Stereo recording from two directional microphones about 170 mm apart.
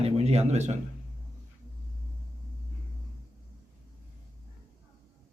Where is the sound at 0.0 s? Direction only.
35° right (ahead or behind).